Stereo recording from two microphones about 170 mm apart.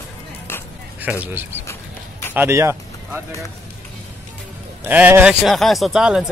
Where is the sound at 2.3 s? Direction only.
15° right (ahead or behind).